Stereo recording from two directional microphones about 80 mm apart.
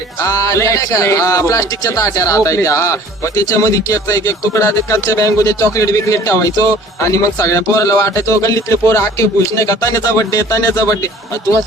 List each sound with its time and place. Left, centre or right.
0.2 s a man's voice: left